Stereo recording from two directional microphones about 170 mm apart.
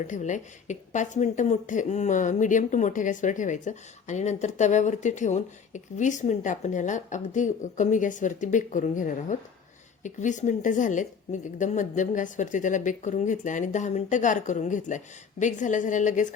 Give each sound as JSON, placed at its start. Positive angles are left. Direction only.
{"t": 0.1, "sound": "a woman's voice", "side_deg": 45}